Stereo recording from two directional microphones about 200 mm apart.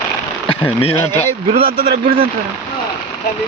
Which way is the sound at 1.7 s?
50° right (ahead or behind).